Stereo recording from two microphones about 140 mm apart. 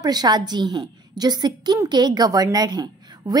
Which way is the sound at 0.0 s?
30° right (ahead or behind).